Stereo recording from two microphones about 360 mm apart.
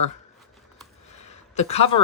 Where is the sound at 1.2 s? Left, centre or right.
Centre.